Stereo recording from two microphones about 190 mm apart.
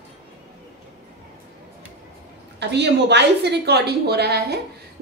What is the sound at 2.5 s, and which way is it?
A woman's voice, 65° right (ahead or behind).